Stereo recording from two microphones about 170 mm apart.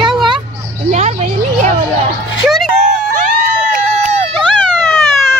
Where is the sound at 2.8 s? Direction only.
50° right (ahead or behind).